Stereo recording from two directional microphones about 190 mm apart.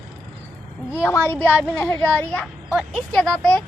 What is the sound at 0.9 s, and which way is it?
A child's voice, 10° left (ahead or behind).